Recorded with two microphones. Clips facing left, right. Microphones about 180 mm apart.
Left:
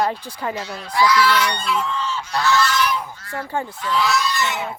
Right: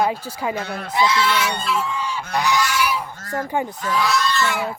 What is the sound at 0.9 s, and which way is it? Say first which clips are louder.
Speech: left 2 dB; 25° right (ahead or behind).